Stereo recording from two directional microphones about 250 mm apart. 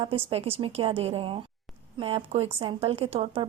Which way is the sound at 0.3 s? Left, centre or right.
Right.